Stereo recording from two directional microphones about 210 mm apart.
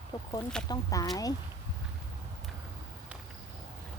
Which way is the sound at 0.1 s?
20° left (ahead or behind).